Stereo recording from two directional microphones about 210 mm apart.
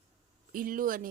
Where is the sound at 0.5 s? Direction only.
40° right (ahead or behind).